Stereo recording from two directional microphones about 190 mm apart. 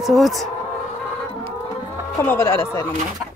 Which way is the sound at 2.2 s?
15° left (ahead or behind).